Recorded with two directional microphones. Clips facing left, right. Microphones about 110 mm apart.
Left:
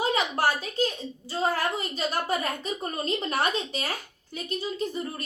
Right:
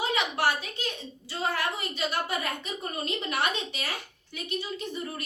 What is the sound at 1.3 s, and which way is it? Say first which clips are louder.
A woman's voice: left 3 dB; 40° left (ahead or behind).